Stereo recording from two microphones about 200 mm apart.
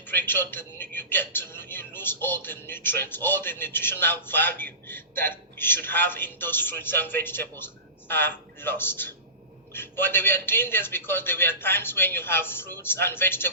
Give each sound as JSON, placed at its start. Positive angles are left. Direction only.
{"t": 0.0, "sound": "speech", "side_deg": 10}